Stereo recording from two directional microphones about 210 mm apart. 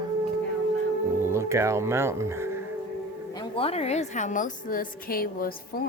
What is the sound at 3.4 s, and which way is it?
A woman's voice, 25° left (ahead or behind).